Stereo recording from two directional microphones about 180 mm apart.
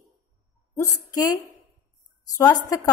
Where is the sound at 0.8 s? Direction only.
20° left (ahead or behind).